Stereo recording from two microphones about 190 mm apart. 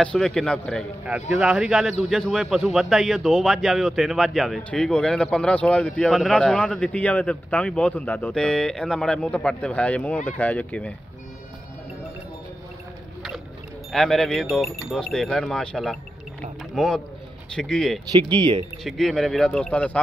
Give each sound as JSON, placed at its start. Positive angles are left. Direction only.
{"t": 0.0, "sound": "a man's voice", "side_deg": 5}
{"t": 13.9, "sound": "a man's voice", "side_deg": 0}
{"t": 18.3, "sound": "speech", "side_deg": -25}
{"t": 18.9, "sound": "a man's voice", "side_deg": 0}